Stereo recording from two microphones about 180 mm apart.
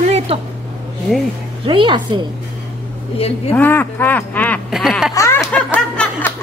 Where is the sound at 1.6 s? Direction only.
30° right (ahead or behind).